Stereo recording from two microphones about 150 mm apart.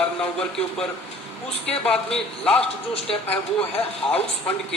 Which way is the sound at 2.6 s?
40° left (ahead or behind).